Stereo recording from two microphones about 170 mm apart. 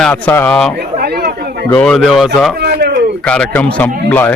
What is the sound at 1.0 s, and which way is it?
Speech, 65° right (ahead or behind).